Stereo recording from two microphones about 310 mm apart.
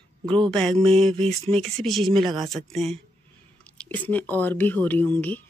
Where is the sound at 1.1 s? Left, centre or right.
Centre.